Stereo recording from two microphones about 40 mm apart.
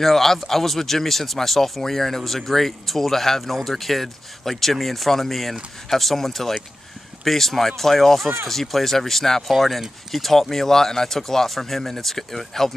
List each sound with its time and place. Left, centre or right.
0.0 s speech: centre